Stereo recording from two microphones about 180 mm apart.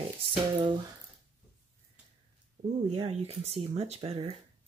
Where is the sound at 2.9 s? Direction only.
35° right (ahead or behind).